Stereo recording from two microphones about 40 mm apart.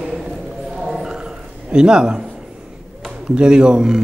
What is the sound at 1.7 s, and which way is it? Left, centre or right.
Speech, right.